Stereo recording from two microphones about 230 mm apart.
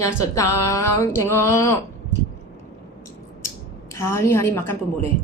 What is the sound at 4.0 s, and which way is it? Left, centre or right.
A woman's voice, centre.